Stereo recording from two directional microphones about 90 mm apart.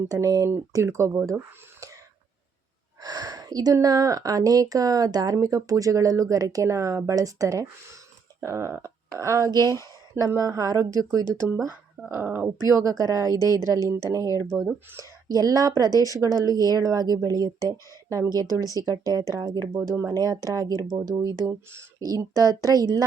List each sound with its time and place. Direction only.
0.1 s speech: 40° right (ahead or behind)
3.0 s speech: 45° right (ahead or behind)
9.5 s speech: 50° right (ahead or behind)
10.2 s speech: 35° right (ahead or behind)
12.6 s speech: 35° right (ahead or behind)
13.7 s speech: 45° left (ahead or behind)
14.1 s speech: 35° right (ahead or behind)
22.2 s speech: 45° right (ahead or behind)